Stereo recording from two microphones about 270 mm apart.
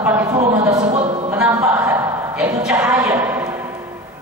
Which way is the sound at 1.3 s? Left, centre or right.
Centre.